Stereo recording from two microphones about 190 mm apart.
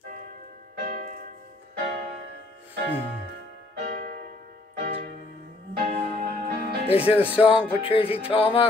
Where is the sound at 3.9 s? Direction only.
55° right (ahead or behind).